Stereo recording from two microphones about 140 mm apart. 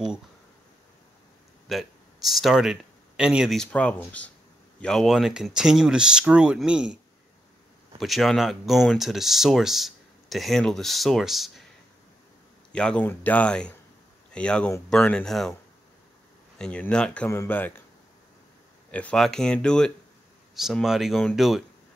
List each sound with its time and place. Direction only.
1.7 s speech: centre (ahead or behind)
3.7 s speech: 10° left (ahead or behind); by 7.0 s 5° right (ahead or behind)
8.0 s speech: centre (ahead or behind)
12.7 s speech: 10° left (ahead or behind)
16.5 s speech: 5° left (ahead or behind)
17.3 s speech: 15° left (ahead or behind)
18.9 s speech: 10° left (ahead or behind)